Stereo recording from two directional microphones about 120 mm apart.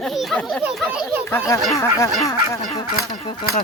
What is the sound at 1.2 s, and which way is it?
Speech, 25° left (ahead or behind).